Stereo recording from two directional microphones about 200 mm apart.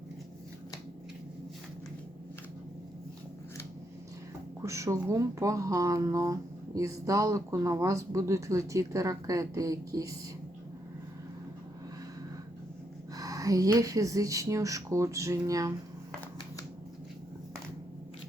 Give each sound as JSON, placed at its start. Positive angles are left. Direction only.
{"t": 4.6, "sound": "speech", "side_deg": -15}
{"t": 13.1, "sound": "speech", "side_deg": -15}